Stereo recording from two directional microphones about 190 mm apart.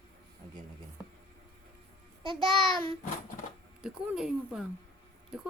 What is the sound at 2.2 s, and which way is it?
Speech, 25° right (ahead or behind).